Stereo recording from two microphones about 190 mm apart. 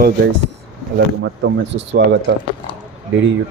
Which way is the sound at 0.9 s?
65° right (ahead or behind).